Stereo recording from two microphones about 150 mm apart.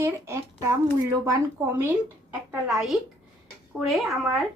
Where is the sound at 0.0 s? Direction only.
20° right (ahead or behind).